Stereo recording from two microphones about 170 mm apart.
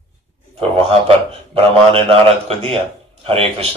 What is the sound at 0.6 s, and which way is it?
A man's voice, 35° right (ahead or behind).